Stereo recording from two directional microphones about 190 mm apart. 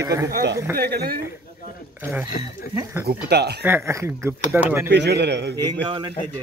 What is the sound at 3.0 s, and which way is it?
Speech, 60° right (ahead or behind).